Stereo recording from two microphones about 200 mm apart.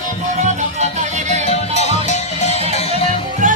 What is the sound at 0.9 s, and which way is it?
Music, 35° right (ahead or behind).